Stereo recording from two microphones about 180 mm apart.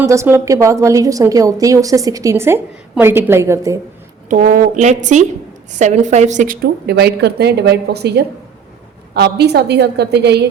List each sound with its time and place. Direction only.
0.0 s a woman's voice: 15° right (ahead or behind)
4.3 s a woman's voice: 50° right (ahead or behind); by 10.3 s 70° right (ahead or behind)